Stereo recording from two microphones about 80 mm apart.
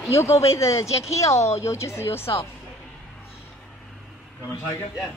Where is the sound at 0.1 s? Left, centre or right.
Left.